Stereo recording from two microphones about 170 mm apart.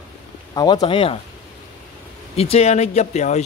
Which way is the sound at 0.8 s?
35° left (ahead or behind).